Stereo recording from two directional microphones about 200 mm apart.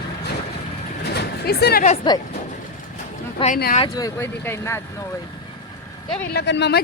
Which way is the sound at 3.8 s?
20° left (ahead or behind).